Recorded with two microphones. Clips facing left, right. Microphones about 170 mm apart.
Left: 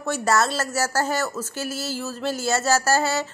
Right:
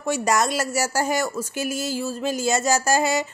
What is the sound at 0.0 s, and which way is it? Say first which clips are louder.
Speech: even; 15° right (ahead or behind).